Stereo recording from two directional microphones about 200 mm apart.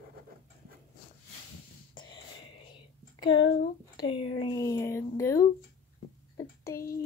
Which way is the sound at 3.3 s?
65° left (ahead or behind).